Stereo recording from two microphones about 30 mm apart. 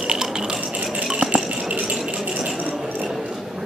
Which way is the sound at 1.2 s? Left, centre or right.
Right.